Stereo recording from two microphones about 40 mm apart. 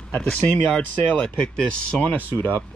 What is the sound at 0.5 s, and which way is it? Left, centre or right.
Speech, left.